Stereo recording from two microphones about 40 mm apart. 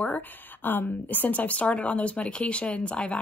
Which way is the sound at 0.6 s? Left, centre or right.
Left.